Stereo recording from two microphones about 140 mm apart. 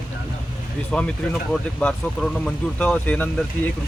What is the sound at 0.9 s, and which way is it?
Speech, 5° left (ahead or behind).